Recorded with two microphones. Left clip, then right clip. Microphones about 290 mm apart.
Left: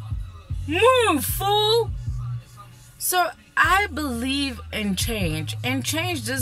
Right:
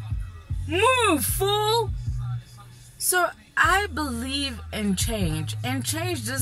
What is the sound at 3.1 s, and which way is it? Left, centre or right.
A woman's voice, centre.